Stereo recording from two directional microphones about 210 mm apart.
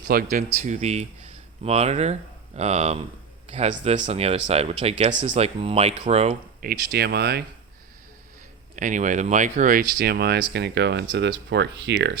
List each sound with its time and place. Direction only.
0.1 s speech: 40° right (ahead or behind)
6.7 s speech: 50° right (ahead or behind)
8.7 s speech: 35° right (ahead or behind)
10.0 s speech: 50° right (ahead or behind)